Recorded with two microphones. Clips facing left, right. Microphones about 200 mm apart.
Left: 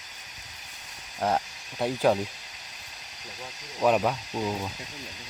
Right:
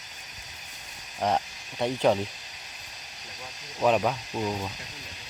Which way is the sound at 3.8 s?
5° left (ahead or behind).